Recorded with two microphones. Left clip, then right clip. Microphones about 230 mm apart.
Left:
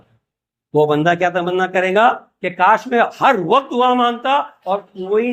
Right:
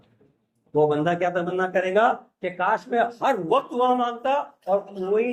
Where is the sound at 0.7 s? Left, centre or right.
Left.